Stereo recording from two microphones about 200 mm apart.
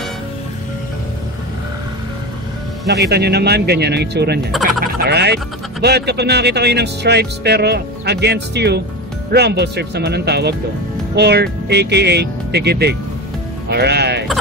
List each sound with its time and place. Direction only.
2.9 s speech: 55° right (ahead or behind)